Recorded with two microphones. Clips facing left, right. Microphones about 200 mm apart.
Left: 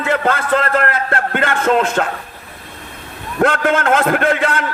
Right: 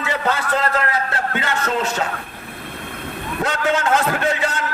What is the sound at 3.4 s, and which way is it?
A man's voice, 55° left (ahead or behind).